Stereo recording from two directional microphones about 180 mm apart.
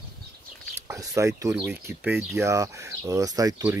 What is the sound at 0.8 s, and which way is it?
Speech, 15° right (ahead or behind).